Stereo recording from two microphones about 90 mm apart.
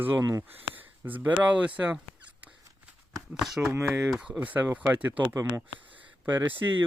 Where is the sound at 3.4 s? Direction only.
Centre (ahead or behind).